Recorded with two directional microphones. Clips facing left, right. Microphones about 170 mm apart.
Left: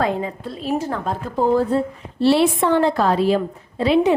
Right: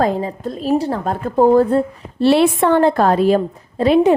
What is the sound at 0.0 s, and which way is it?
A woman's voice, 40° right (ahead or behind).